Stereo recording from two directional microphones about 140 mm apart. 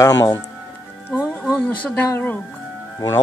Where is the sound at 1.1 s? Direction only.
10° right (ahead or behind).